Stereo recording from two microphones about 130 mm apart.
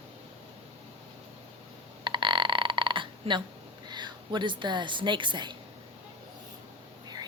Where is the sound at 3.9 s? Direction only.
35° right (ahead or behind).